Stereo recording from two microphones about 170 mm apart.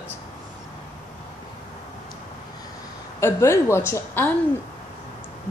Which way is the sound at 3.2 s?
15° left (ahead or behind).